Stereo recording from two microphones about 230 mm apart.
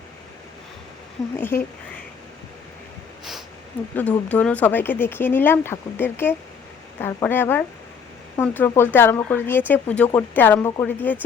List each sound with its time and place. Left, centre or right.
1.4 s speech: centre
3.9 s speech: centre